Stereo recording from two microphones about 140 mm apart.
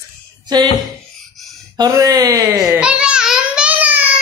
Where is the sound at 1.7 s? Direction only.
25° right (ahead or behind).